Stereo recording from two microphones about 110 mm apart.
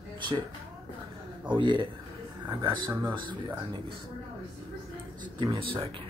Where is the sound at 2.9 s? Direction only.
20° right (ahead or behind).